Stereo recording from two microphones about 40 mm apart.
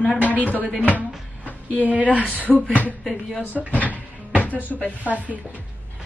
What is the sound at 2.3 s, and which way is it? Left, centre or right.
Speech, left.